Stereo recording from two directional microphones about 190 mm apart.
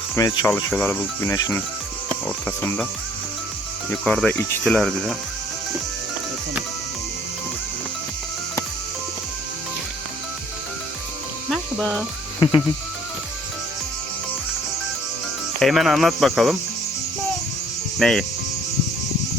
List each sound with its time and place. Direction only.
0.2 s speech: 15° left (ahead or behind)
4.0 s speech: 5° left (ahead or behind)
11.4 s music: centre (ahead or behind)
12.4 s speech: 25° left (ahead or behind)
15.6 s speech: centre (ahead or behind)
18.0 s speech: centre (ahead or behind)